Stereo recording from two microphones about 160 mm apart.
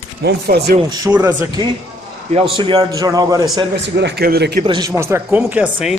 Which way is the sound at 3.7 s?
90° right.